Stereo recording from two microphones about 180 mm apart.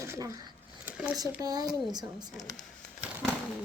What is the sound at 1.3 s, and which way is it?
Speech, 20° right (ahead or behind).